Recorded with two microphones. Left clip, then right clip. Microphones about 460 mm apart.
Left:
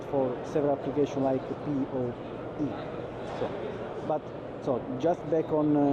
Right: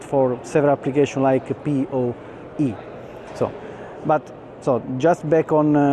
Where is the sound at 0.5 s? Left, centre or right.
Right.